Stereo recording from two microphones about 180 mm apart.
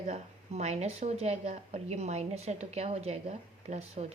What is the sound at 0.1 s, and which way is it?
Speech, 40° right (ahead or behind).